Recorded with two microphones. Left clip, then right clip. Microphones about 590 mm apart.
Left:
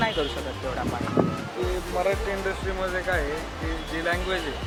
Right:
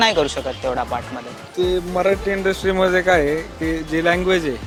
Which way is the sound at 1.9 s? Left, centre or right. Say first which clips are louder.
Right 5 dB; right.